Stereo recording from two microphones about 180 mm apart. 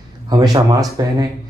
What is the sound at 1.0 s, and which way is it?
Speech, 20° right (ahead or behind).